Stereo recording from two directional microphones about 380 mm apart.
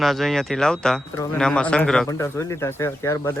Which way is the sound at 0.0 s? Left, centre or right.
Centre.